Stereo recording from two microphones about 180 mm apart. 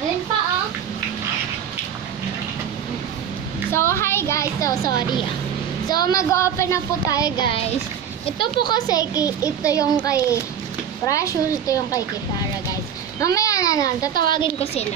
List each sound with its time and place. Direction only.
3.7 s a woman's voice: 15° left (ahead or behind)
13.2 s speech: 20° left (ahead or behind); by 14.9 s 35° left (ahead or behind)